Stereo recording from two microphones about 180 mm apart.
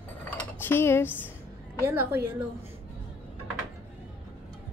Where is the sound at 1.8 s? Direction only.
15° right (ahead or behind).